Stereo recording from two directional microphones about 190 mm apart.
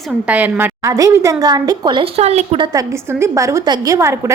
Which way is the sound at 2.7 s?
15° right (ahead or behind).